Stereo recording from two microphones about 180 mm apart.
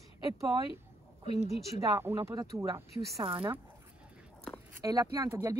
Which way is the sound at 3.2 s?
30° right (ahead or behind).